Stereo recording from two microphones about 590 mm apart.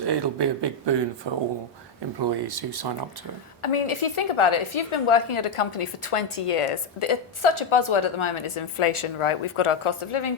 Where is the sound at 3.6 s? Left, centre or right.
Left.